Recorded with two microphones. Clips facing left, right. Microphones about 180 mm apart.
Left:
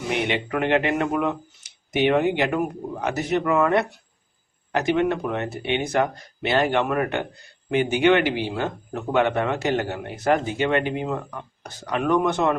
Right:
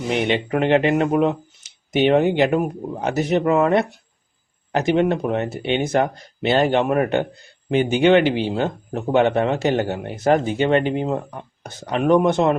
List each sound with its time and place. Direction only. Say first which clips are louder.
0.1 s speech: right 4 dB; 30° right (ahead or behind)